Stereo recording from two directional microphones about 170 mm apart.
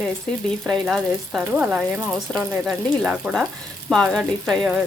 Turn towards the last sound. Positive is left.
turn(degrees=0)  # may be behind; listen again after turning